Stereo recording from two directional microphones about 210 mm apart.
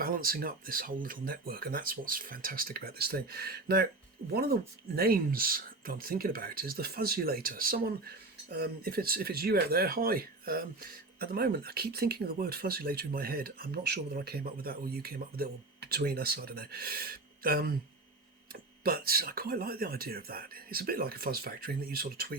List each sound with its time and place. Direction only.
0.0 s speech: 45° right (ahead or behind)
18.8 s speech: 45° right (ahead or behind)